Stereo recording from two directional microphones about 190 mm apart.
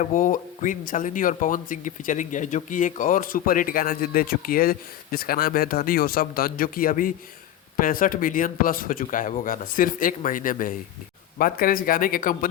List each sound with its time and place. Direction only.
0.0 s speech: 45° left (ahead or behind)